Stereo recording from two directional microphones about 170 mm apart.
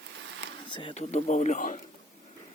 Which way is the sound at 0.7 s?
35° left (ahead or behind).